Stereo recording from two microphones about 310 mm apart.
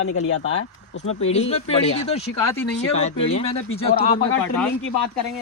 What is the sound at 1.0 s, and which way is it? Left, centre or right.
Speech, centre.